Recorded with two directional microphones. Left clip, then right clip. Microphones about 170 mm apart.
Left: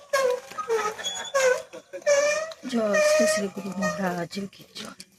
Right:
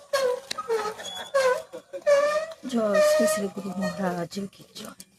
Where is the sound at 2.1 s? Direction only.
20° left (ahead or behind).